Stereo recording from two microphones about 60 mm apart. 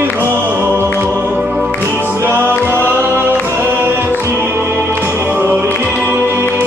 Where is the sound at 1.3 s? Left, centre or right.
Centre.